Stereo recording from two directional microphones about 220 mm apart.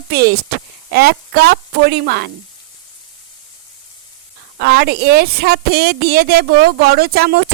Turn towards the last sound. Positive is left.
turn(degrees=-45)  # may be behind; listen again after turning